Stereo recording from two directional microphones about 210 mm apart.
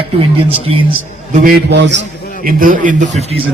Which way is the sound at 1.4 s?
55° right (ahead or behind).